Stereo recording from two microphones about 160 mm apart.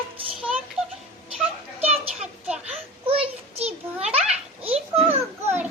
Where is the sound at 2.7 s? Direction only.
40° right (ahead or behind).